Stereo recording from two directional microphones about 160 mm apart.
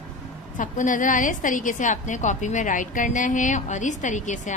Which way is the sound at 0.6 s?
55° left (ahead or behind).